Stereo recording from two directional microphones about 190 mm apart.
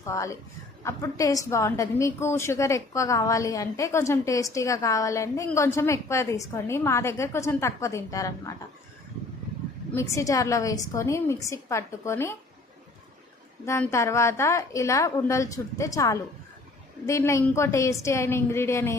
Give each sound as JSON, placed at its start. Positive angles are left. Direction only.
{"t": 0.0, "sound": "a woman's voice", "side_deg": 15}
{"t": 9.9, "sound": "a woman's voice", "side_deg": 15}
{"t": 13.7, "sound": "a woman's voice", "side_deg": 15}